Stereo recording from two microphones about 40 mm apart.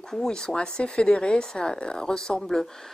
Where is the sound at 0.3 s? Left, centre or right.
Centre.